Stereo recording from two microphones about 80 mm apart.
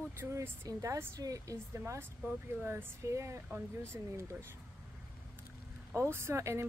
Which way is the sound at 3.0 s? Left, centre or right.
Right.